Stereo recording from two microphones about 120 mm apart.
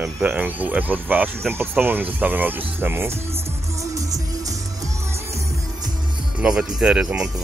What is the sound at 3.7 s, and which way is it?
Music, 25° right (ahead or behind).